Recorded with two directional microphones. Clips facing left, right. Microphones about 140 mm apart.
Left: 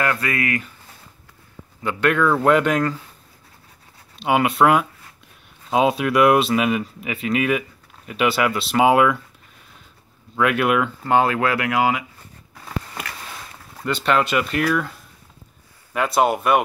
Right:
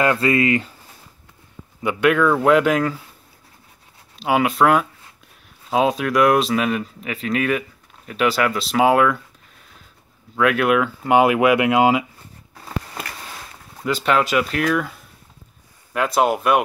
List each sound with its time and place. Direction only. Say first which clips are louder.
0.0 s speech: right 5 dB; 25° right (ahead or behind)
1.8 s speech: right 2 dB; 10° right (ahead or behind)
4.2 s speech: even; centre (ahead or behind)
10.3 s speech: right 2 dB; centre (ahead or behind)
11.1 s speech: right 4 dB; 15° right (ahead or behind)
14.0 s speech: right 1 dB; centre (ahead or behind)